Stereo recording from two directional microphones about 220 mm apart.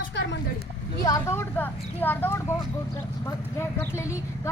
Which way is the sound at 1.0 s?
15° left (ahead or behind).